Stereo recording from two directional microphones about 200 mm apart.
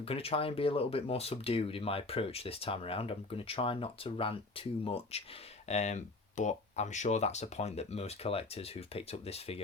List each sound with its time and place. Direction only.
0.0 s speech: 30° left (ahead or behind)